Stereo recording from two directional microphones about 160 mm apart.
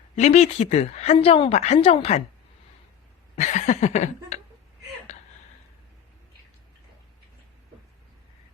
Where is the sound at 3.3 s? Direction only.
45° left (ahead or behind).